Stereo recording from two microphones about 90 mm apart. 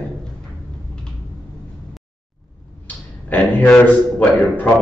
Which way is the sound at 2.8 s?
20° left (ahead or behind).